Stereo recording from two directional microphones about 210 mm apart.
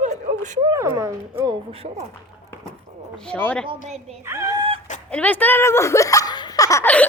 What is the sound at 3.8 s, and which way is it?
Speech, 30° right (ahead or behind).